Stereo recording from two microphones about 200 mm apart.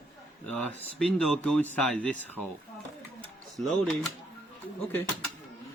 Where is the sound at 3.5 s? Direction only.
Centre (ahead or behind).